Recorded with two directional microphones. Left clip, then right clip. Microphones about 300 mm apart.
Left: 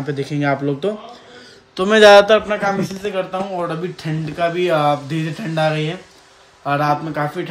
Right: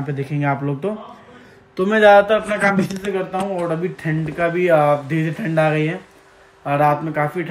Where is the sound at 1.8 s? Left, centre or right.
Left.